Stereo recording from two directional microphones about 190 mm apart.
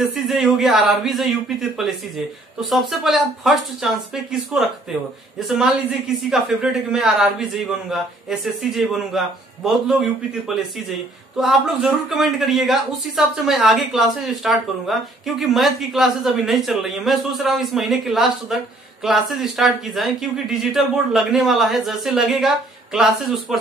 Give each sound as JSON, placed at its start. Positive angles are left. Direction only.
{"t": 0.1, "sound": "a man's voice", "side_deg": 0}